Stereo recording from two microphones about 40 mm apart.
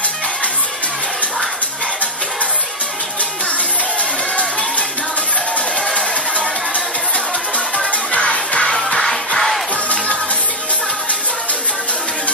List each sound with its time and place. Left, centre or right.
5.8 s music: centre
6.3 s music: left
8.1 s music: left